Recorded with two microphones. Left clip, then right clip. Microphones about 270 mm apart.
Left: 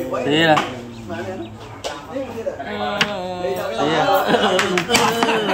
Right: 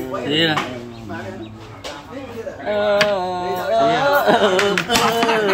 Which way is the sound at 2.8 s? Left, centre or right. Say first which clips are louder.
Right 5 dB; centre.